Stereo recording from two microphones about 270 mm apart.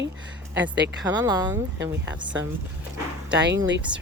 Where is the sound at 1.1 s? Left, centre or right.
Centre.